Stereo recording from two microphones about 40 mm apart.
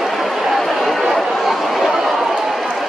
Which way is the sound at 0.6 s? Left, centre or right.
Centre.